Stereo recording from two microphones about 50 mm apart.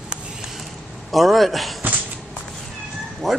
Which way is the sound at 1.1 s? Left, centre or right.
Centre.